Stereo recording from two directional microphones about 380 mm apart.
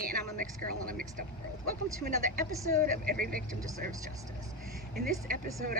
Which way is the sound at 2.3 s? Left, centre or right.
Right.